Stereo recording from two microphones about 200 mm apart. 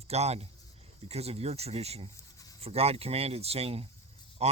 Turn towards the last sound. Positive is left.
turn(degrees=-30)  # may be behind; listen again after turning